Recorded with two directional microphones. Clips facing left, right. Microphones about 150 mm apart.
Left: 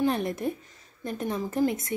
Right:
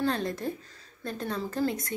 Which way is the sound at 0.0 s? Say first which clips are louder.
Left 3 dB; 20° left (ahead or behind).